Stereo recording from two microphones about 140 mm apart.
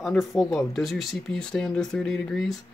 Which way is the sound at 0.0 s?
Centre (ahead or behind).